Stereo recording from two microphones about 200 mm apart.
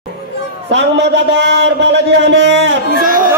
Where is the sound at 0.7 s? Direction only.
60° right (ahead or behind).